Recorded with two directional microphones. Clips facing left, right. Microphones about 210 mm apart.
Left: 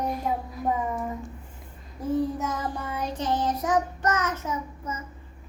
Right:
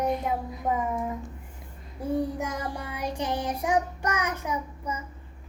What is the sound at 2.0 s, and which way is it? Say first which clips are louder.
Child singing: left 2 dB; 10° right (ahead or behind).